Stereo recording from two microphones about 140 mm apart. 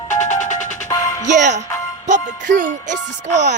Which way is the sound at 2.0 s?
65° right (ahead or behind).